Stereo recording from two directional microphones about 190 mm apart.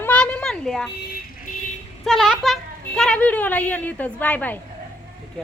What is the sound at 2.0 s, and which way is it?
A woman's voice, centre (ahead or behind).